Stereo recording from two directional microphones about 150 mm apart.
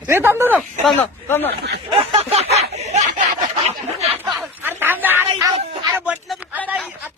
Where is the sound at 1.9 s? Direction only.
40° right (ahead or behind).